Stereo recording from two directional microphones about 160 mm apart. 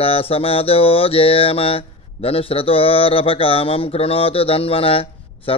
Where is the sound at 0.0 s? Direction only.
35° left (ahead or behind).